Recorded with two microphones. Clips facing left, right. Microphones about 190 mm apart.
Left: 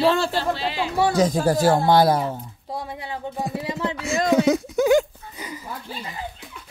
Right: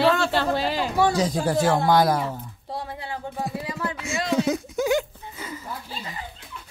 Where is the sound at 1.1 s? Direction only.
50° left (ahead or behind); by 2.4 s 25° left (ahead or behind).